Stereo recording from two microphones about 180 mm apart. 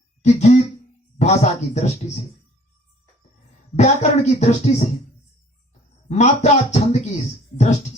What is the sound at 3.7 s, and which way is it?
Speech, 40° left (ahead or behind).